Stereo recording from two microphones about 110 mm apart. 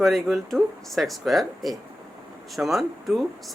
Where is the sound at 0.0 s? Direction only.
Centre (ahead or behind).